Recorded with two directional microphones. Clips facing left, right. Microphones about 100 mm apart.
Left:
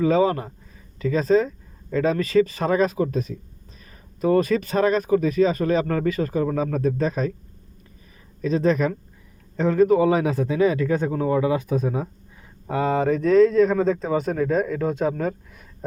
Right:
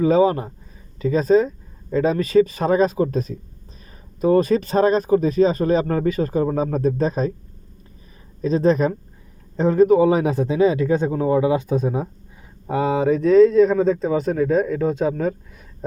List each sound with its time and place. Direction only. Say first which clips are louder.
0.0 s speech: right 3 dB; 20° right (ahead or behind)
3.1 s speech: right 2 dB; 40° right (ahead or behind)
4.2 s speech: right 3 dB; 25° right (ahead or behind)
8.4 s speech: right 3 dB; 30° right (ahead or behind)
12.6 s speech: right 2 dB; 10° right (ahead or behind)